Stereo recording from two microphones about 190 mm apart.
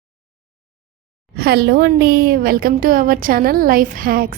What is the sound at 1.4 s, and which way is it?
A woman's voice, 55° right (ahead or behind).